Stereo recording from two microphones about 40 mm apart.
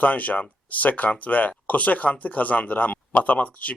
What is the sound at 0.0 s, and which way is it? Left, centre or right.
Speech, left.